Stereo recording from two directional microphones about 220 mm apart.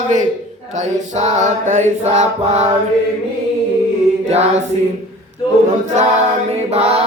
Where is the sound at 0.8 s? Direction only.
30° right (ahead or behind).